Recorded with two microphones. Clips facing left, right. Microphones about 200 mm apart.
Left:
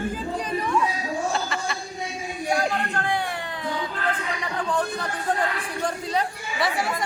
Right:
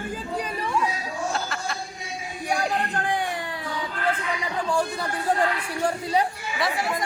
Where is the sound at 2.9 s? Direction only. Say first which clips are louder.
Even; 15° right (ahead or behind).